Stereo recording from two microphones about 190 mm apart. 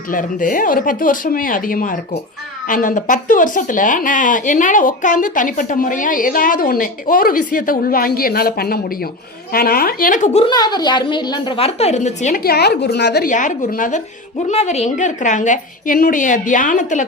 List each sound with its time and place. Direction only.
0.1 s speech: 45° left (ahead or behind)
10.4 s a woman's voice: 20° left (ahead or behind); by 13.2 s 60° left (ahead or behind)
13.2 s a woman's voice: 40° left (ahead or behind)
14.5 s a woman's voice: 35° left (ahead or behind)